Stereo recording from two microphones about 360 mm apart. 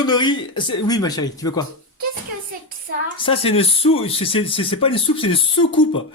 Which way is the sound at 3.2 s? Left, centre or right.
Centre.